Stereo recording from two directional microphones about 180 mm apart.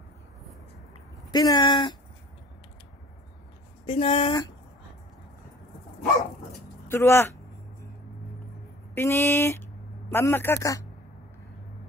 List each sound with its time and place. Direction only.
1.3 s a sound: 20° left (ahead or behind)
3.8 s speech: 30° left (ahead or behind)
6.9 s speech: 15° left (ahead or behind)
8.9 s speech: 15° left (ahead or behind)